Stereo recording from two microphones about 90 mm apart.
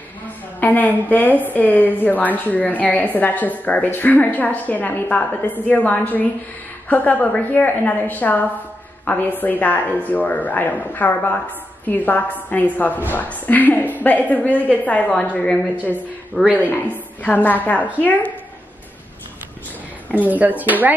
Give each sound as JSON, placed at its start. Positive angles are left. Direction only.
{"t": 0.6, "sound": "a woman's voice", "side_deg": 20}
{"t": 20.1, "sound": "speech", "side_deg": -15}